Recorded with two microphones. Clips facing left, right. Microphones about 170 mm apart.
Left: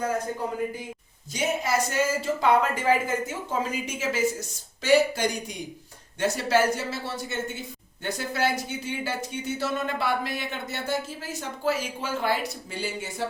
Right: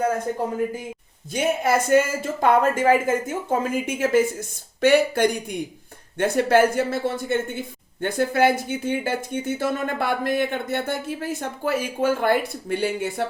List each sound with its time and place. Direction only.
1.3 s speech: 55° right (ahead or behind)